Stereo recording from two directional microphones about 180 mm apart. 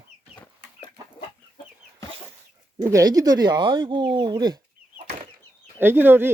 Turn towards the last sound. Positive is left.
turn(degrees=-10)  # may be behind; listen again after turning